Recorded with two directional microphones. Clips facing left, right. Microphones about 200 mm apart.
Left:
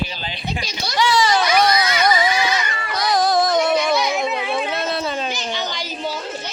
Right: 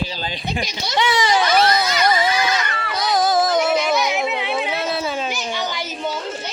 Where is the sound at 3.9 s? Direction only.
20° right (ahead or behind).